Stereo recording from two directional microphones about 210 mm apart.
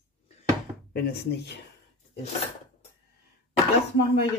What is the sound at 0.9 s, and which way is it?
Speech, 50° left (ahead or behind).